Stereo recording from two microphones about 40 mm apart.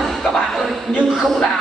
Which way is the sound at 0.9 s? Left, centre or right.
Centre.